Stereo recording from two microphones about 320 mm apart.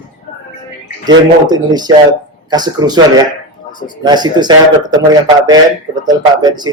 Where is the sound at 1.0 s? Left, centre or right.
Centre.